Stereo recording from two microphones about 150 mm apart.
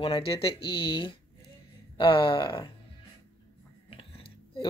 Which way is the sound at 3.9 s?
35° left (ahead or behind).